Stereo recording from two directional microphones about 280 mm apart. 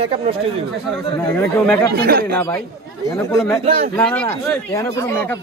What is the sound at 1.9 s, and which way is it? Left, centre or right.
Speech, right.